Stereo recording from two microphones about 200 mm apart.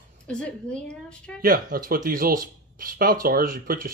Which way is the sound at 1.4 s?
45° right (ahead or behind).